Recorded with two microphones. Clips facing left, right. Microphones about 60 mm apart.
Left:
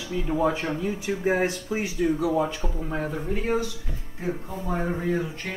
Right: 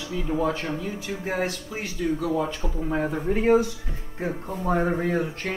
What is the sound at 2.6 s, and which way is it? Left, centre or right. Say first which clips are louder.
Speech: right 3 dB; centre.